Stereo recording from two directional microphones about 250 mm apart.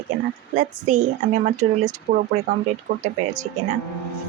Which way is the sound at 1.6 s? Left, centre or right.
Right.